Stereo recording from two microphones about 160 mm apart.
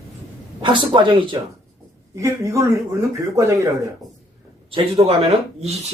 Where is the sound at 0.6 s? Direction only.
30° right (ahead or behind).